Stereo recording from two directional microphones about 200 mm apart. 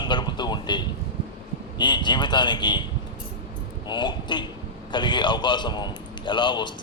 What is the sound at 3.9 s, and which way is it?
A man's voice, 20° left (ahead or behind).